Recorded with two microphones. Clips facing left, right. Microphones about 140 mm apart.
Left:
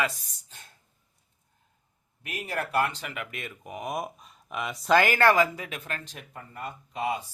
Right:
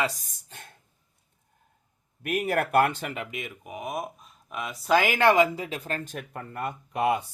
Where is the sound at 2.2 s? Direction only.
55° right (ahead or behind).